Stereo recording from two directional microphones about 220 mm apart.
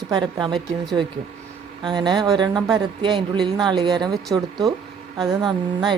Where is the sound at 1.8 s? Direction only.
20° right (ahead or behind).